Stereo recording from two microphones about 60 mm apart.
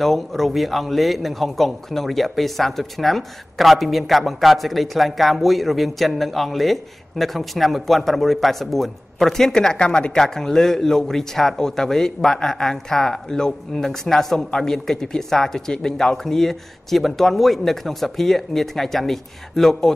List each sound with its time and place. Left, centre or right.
0.0 s a man's voice: centre